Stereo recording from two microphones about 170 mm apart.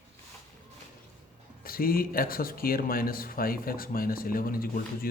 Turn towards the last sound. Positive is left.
turn(degrees=60)  # may be behind; listen again after turning